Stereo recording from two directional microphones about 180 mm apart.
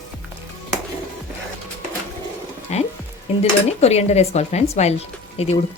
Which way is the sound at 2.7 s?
40° left (ahead or behind).